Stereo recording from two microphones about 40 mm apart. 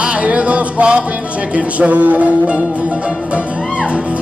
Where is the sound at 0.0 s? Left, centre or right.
Right.